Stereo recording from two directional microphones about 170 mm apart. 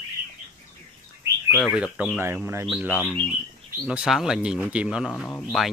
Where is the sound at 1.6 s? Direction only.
5° right (ahead or behind).